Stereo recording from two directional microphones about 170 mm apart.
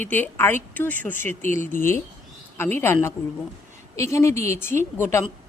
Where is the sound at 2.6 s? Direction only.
15° left (ahead or behind).